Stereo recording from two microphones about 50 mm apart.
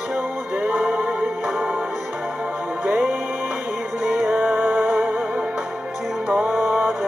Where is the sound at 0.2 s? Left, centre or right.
Right.